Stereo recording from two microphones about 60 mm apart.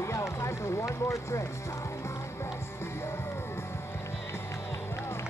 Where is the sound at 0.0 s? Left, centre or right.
Left.